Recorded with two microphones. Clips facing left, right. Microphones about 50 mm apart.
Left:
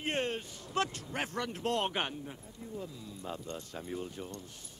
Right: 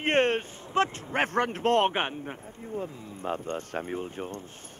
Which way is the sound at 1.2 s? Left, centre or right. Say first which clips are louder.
Right 10 dB; right.